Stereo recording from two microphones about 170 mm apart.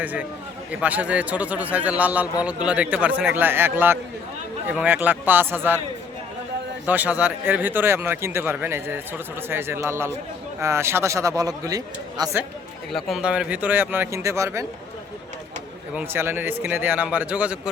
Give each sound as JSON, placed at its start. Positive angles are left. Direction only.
{"t": 0.0, "sound": "speech", "side_deg": -10}
{"t": 6.8, "sound": "speech", "side_deg": -10}
{"t": 12.9, "sound": "speech", "side_deg": 0}
{"t": 16.0, "sound": "speech", "side_deg": -10}